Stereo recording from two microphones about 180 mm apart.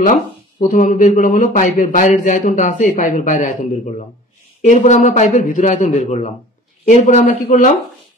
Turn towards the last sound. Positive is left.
turn(degrees=45)  # may be behind; listen again after turning